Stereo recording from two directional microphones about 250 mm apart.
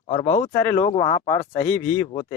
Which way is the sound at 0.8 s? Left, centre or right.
Left.